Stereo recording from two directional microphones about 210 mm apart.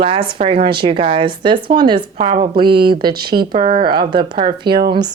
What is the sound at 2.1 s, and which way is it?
Speech, 35° right (ahead or behind).